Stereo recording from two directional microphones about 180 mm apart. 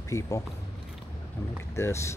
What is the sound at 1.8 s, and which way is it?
Speech, 15° left (ahead or behind).